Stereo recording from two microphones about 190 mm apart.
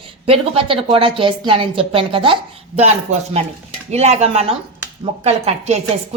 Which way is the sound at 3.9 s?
35° right (ahead or behind).